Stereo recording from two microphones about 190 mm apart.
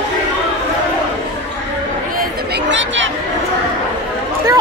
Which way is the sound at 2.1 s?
65° right (ahead or behind).